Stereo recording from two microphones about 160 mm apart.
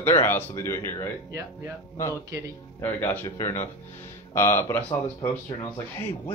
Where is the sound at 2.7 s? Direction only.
15° left (ahead or behind).